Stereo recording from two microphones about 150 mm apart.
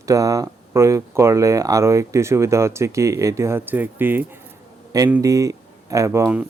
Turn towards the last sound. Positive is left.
turn(degrees=-15)  # may be behind; listen again after turning